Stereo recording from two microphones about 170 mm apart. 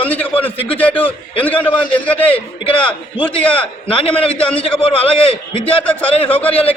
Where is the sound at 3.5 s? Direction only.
30° left (ahead or behind).